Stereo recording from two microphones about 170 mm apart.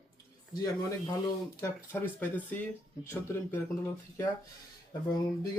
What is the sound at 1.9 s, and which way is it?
Speech, 10° left (ahead or behind).